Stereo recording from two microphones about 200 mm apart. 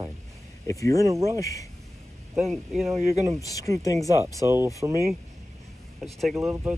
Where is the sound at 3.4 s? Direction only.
15° left (ahead or behind).